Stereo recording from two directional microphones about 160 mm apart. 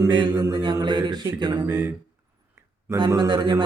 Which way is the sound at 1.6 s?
15° right (ahead or behind).